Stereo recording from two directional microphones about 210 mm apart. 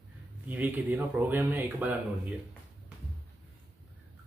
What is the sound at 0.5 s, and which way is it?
Speech, 10° right (ahead or behind).